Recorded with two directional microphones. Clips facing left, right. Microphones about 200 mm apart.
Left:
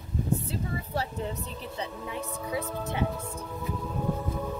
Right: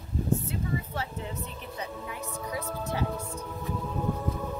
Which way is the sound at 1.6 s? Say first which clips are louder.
Left 1 dB; 30° left (ahead or behind).